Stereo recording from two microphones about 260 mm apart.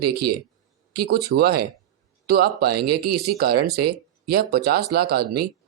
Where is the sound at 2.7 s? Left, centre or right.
Right.